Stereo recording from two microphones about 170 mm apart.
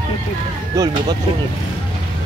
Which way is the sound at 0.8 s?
20° right (ahead or behind).